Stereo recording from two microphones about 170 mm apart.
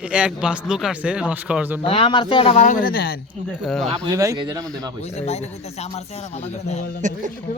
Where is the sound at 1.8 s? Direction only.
35° left (ahead or behind).